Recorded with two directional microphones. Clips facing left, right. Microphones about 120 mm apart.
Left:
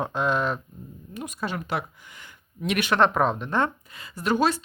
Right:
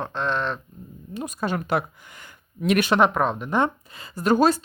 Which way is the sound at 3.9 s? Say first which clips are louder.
Right 5 dB; 35° right (ahead or behind).